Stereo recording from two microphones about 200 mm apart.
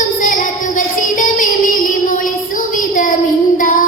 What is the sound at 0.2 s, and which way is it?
Music, 40° left (ahead or behind).